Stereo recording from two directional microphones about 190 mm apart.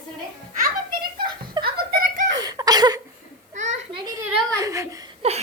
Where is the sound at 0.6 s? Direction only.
50° right (ahead or behind).